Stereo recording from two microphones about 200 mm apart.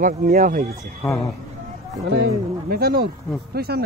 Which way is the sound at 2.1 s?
55° right (ahead or behind).